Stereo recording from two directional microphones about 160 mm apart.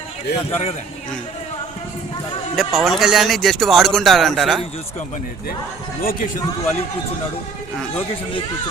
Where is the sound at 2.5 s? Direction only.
Centre (ahead or behind).